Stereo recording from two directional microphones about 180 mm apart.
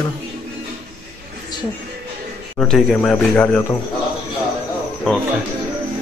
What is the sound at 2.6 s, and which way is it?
Speech, centre (ahead or behind).